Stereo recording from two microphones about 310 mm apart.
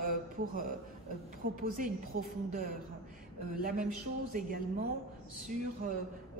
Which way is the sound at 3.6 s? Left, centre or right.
Right.